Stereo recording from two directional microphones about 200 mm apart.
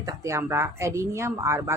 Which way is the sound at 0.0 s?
15° right (ahead or behind).